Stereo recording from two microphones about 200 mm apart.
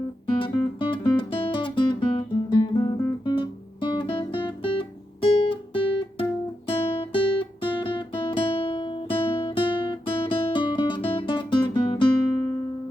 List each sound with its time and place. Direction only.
0.3 s music: 25° left (ahead or behind)
6.7 s guitar: 25° left (ahead or behind)